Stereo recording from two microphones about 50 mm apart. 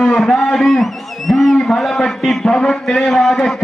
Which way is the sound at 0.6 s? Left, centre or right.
Centre.